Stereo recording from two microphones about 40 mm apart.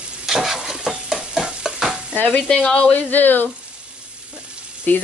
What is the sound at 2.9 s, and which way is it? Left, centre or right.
Speech, left.